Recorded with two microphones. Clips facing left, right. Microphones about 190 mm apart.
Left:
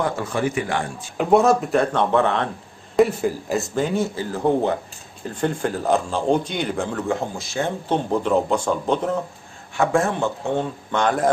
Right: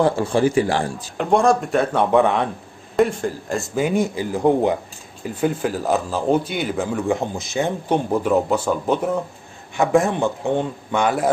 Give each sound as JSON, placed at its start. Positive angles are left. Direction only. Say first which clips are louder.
{"t": 0.0, "sound": "a man's voice", "louder": "right 5 dB", "side_deg": -30}
{"t": 1.1, "sound": "speech", "louder": "left 1 dB", "side_deg": 5}
{"t": 3.0, "sound": "speech", "louder": "left 1 dB", "side_deg": 5}